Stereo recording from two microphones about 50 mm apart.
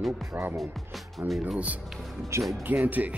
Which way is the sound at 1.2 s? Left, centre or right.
Right.